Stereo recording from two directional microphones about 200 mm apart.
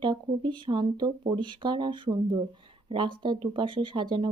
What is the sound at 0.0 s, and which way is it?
Speech, 25° right (ahead or behind).